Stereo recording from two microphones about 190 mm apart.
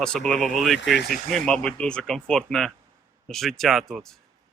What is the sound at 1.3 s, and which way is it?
Speech, 5° left (ahead or behind).